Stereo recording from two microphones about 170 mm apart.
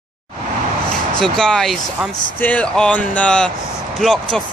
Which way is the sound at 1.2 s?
5° left (ahead or behind).